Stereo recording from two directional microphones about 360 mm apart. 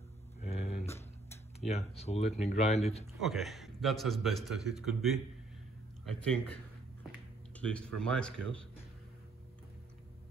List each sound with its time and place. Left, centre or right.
0.4 s a sound: centre
1.7 s speech: centre
3.2 s a man's voice: centre
6.2 s speech: centre